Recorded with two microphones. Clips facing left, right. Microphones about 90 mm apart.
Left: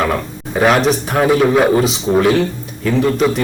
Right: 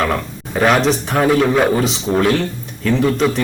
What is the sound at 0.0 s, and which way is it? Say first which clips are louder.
A man's voice: left 1 dB; 5° left (ahead or behind).